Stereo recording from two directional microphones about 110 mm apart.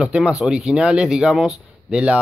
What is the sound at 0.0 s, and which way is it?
Speech, 10° right (ahead or behind).